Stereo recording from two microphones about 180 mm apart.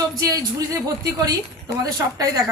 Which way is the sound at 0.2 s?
20° right (ahead or behind).